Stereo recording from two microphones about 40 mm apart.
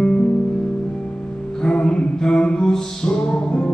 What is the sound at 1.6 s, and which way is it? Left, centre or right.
Music, left.